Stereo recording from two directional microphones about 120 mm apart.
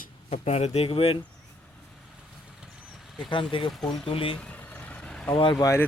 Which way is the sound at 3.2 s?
40° left (ahead or behind).